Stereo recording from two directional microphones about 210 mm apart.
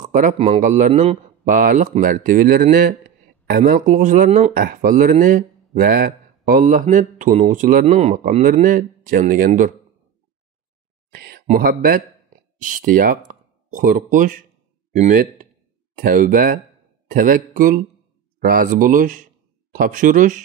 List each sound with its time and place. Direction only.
0.0 s speech: 35° right (ahead or behind)
11.1 s a sound: 50° right (ahead or behind)
11.4 s speech: 40° right (ahead or behind)